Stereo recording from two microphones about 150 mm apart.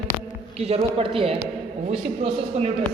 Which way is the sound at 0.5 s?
40° right (ahead or behind).